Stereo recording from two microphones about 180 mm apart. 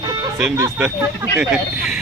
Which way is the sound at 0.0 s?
20° right (ahead or behind).